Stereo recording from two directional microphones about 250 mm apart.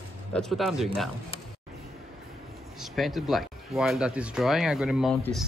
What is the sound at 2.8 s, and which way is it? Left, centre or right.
Speech, centre.